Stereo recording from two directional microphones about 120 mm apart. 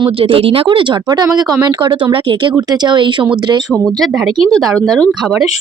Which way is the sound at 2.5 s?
35° right (ahead or behind).